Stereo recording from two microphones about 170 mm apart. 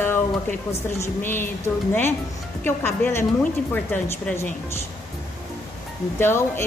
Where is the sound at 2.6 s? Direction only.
10° left (ahead or behind).